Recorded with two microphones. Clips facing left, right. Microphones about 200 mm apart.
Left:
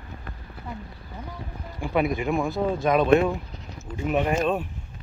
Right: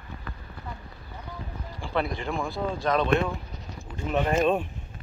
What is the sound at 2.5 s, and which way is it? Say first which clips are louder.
Speech: left 4 dB; 20° left (ahead or behind).